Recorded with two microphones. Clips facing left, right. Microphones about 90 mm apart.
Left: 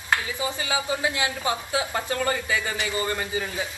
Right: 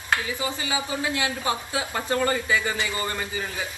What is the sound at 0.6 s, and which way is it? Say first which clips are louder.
Speech: left 2 dB; 25° left (ahead or behind).